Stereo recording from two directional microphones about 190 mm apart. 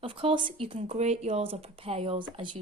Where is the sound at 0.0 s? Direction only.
30° right (ahead or behind).